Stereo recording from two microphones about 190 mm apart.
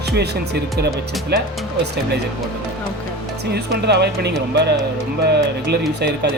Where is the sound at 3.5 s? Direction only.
60° right (ahead or behind).